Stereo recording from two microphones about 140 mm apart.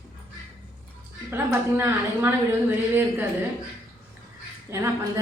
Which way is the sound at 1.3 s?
15° right (ahead or behind).